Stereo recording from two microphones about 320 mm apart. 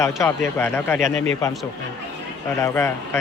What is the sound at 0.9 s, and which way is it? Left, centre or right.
Speech, right.